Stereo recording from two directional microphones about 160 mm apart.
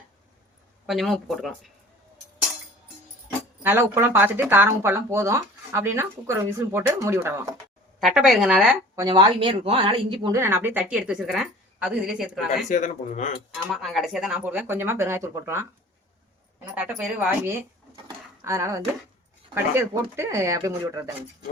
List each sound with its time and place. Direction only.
0.9 s a woman's voice: centre (ahead or behind)
3.6 s speech: 15° right (ahead or behind)
8.0 s a woman's voice: centre (ahead or behind)
9.0 s speech: 25° right (ahead or behind)
10.3 s a woman's voice: 15° right (ahead or behind)
12.6 s a man's voice: 50° left (ahead or behind)
13.5 s speech: centre (ahead or behind)
16.7 s speech: 10° right (ahead or behind)